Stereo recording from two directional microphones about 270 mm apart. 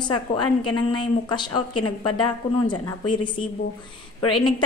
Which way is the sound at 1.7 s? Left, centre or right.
Left.